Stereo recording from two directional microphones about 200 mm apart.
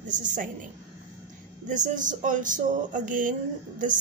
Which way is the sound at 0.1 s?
40° right (ahead or behind).